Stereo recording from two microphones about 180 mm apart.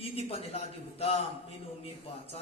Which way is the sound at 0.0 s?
35° left (ahead or behind).